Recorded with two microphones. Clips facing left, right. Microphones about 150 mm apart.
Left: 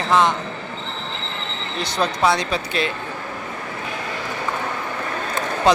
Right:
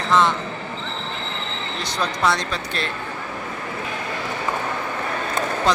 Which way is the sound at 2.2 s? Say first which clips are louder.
Left 2 dB; 5° left (ahead or behind).